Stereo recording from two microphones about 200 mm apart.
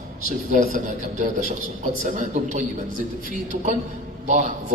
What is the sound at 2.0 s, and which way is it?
A man's voice, 40° right (ahead or behind).